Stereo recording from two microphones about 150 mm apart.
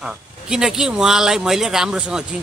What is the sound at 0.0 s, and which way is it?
Speech, 5° right (ahead or behind).